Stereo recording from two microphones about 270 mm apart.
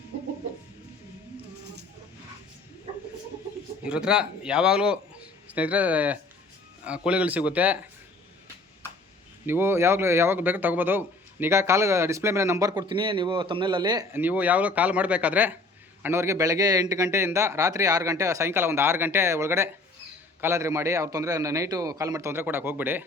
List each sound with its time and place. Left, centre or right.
3.8 s a man's voice: centre
9.5 s a man's voice: centre